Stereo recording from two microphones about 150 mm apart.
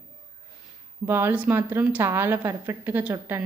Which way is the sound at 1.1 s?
15° right (ahead or behind).